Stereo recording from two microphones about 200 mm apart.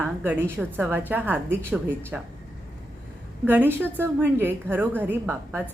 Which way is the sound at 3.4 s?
10° right (ahead or behind).